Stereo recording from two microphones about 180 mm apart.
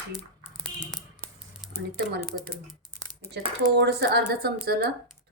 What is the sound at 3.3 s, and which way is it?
Speech, 65° right (ahead or behind).